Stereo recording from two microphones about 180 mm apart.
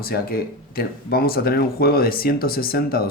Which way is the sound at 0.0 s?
55° left (ahead or behind).